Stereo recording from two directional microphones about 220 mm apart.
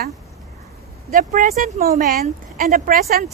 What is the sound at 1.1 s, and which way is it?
A woman's voice, 35° right (ahead or behind).